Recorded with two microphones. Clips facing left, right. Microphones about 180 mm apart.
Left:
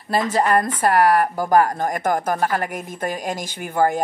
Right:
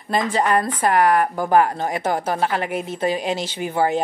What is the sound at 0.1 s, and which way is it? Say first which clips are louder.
A woman's voice: left 1 dB; 40° left (ahead or behind).